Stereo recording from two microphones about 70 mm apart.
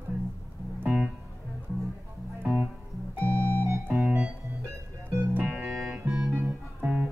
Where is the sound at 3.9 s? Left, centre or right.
Centre.